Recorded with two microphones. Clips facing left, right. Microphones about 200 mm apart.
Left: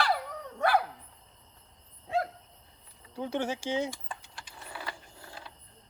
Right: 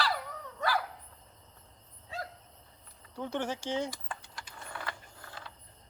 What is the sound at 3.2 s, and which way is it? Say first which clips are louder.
Speech: left 2 dB; 10° left (ahead or behind).